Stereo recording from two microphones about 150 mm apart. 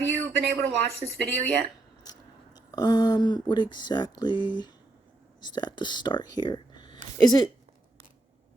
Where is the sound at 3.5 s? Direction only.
30° left (ahead or behind).